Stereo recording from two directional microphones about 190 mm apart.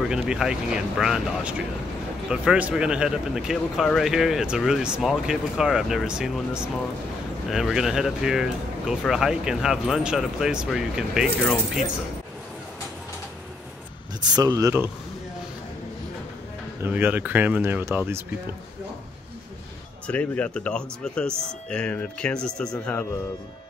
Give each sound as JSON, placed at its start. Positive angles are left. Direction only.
{"t": 0.1, "sound": "speech", "side_deg": -5}
{"t": 14.3, "sound": "speech", "side_deg": -20}
{"t": 16.8, "sound": "speech", "side_deg": -10}
{"t": 20.1, "sound": "speech", "side_deg": 5}